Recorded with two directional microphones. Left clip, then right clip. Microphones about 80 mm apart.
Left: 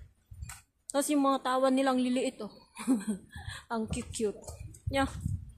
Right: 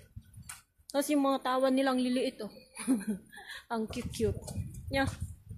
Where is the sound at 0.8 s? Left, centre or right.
Left.